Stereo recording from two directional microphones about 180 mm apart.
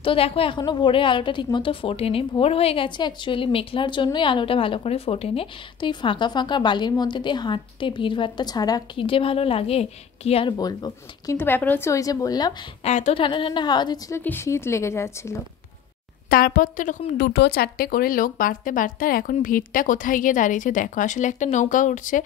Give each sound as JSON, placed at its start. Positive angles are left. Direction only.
{"t": 0.0, "sound": "a woman's voice", "side_deg": 30}
{"t": 10.6, "sound": "a woman's voice", "side_deg": 20}
{"t": 12.8, "sound": "speech", "side_deg": 40}
{"t": 13.2, "sound": "a woman's voice", "side_deg": 25}
{"t": 16.3, "sound": "speech", "side_deg": 55}
{"t": 17.2, "sound": "speech", "side_deg": 70}